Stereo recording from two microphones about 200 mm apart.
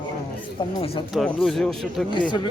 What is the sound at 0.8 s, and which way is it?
Speech, 25° left (ahead or behind).